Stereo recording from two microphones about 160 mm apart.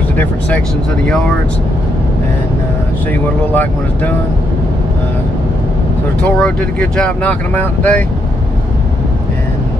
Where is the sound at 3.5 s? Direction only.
10° left (ahead or behind).